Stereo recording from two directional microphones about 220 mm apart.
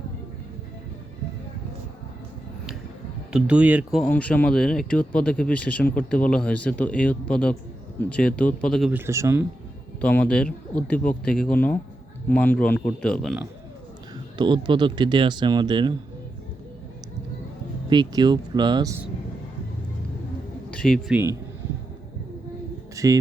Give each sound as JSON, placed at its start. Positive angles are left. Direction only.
{"t": 3.3, "sound": "speech", "side_deg": -5}
{"t": 10.0, "sound": "speech", "side_deg": 5}
{"t": 14.3, "sound": "speech", "side_deg": -20}
{"t": 17.8, "sound": "speech", "side_deg": -20}
{"t": 20.7, "sound": "a man's voice", "side_deg": 5}
{"t": 23.0, "sound": "speech", "side_deg": -15}